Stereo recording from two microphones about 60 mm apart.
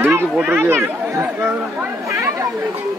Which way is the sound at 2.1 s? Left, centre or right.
Right.